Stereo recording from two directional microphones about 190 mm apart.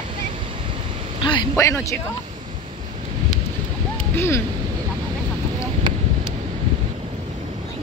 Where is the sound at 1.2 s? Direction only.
25° left (ahead or behind).